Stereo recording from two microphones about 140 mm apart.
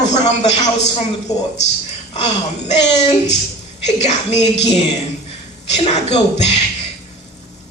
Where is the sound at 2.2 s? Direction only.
55° left (ahead or behind).